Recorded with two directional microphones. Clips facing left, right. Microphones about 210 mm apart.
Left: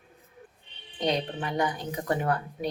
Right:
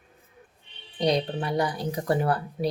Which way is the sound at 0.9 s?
35° right (ahead or behind).